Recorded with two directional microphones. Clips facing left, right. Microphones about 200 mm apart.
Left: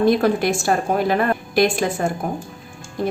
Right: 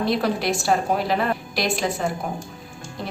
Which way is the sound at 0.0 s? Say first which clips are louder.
Left 6 dB; 50° left (ahead or behind).